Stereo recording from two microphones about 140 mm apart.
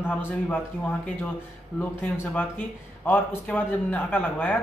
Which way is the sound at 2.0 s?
15° left (ahead or behind).